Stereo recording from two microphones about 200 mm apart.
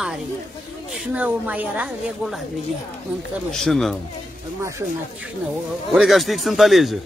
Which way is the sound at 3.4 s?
Centre (ahead or behind).